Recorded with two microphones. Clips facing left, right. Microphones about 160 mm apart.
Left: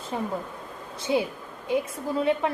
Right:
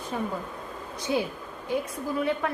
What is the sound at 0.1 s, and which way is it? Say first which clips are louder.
A woman's voice: left 2 dB; 20° left (ahead or behind).